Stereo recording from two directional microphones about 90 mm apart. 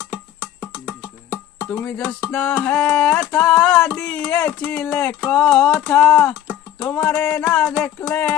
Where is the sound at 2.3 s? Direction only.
10° left (ahead or behind).